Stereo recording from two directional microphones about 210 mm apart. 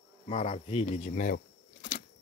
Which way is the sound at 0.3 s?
30° left (ahead or behind).